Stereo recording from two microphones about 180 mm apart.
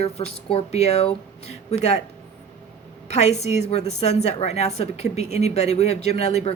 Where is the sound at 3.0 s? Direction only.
35° left (ahead or behind).